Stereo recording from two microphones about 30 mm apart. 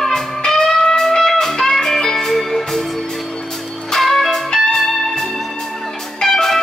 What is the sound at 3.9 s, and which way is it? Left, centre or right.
Music, centre.